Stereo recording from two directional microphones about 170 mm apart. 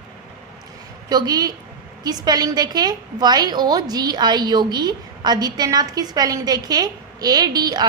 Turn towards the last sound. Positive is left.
turn(degrees=-25)  # may be behind; listen again after turning